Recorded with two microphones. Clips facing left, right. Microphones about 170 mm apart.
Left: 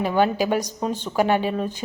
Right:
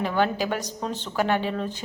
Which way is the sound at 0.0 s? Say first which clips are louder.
Left 4 dB; 15° left (ahead or behind).